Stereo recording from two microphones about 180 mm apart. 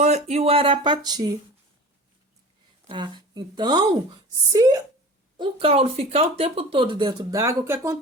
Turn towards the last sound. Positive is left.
turn(degrees=-15)  # may be behind; listen again after turning